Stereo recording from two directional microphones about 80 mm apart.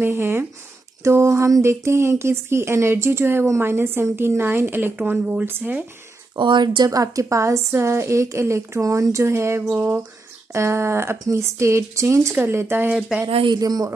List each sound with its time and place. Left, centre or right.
0.0 s a woman's voice: right
6.3 s speech: right
6.9 s a woman's voice: right
9.7 s a woman's voice: right
10.5 s a woman's voice: right
13.6 s speech: right